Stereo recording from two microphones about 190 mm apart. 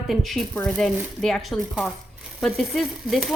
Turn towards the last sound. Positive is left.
turn(degrees=0)  # may be behind; listen again after turning